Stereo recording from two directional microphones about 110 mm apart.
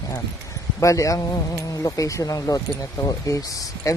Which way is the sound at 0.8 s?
30° left (ahead or behind).